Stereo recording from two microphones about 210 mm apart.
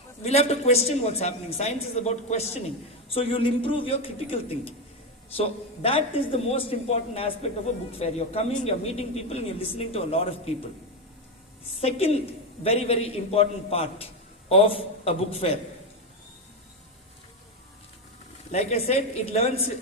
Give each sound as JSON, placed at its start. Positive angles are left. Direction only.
{"t": 0.2, "sound": "a woman's voice", "side_deg": 30}
{"t": 11.8, "sound": "a man's voice", "side_deg": 30}
{"t": 18.5, "sound": "a woman's voice", "side_deg": 30}